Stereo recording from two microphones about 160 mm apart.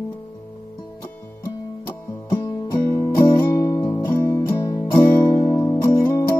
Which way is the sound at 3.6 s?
20° left (ahead or behind).